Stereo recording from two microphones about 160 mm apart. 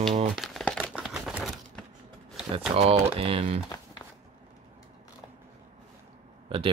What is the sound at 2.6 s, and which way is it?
Speech, 40° right (ahead or behind).